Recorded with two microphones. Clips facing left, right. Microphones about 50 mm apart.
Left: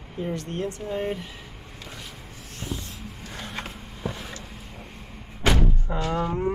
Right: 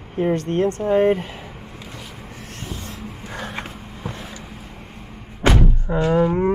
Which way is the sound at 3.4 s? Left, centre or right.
Centre.